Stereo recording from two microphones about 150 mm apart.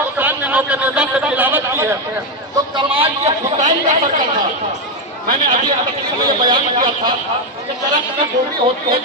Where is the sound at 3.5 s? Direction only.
55° right (ahead or behind).